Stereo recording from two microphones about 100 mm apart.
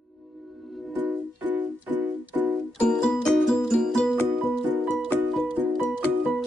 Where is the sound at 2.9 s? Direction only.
5° left (ahead or behind).